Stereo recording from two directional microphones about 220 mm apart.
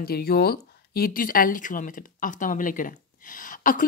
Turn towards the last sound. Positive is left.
turn(degrees=40)  # may be behind; listen again after turning